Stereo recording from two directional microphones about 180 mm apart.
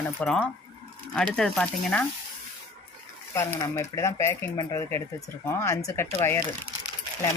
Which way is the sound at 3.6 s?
15° left (ahead or behind).